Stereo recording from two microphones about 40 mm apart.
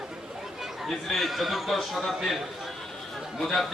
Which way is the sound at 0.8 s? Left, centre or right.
Centre.